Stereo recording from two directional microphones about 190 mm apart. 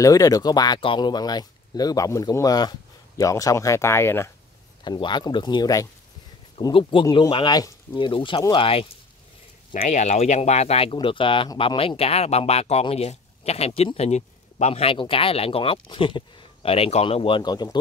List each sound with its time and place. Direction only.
0.0 s speech: 20° left (ahead or behind)
4.8 s speech: 25° left (ahead or behind)